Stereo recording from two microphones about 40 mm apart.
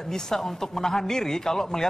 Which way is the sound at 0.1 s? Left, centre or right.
Centre.